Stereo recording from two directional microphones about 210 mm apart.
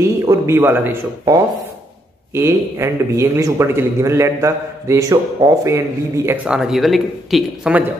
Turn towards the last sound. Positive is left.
turn(degrees=-5)  # may be behind; listen again after turning